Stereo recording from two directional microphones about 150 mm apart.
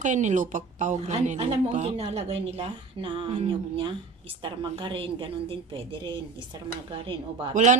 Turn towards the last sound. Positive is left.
turn(degrees=-35)  # may be behind; listen again after turning